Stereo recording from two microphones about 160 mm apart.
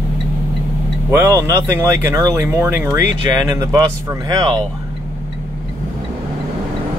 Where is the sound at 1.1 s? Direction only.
20° right (ahead or behind).